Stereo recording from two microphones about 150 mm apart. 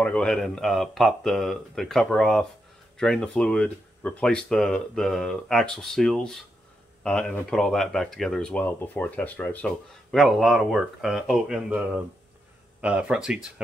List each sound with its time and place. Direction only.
0.0 s speech: 5° left (ahead or behind)
9.7 s speech: centre (ahead or behind)
12.8 s speech: 10° right (ahead or behind)